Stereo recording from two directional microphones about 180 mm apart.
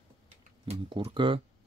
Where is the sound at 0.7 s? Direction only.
30° right (ahead or behind).